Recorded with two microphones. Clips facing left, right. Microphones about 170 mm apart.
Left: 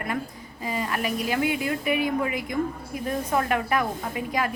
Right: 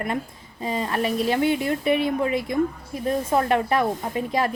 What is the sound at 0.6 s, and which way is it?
A woman's voice, 30° right (ahead or behind).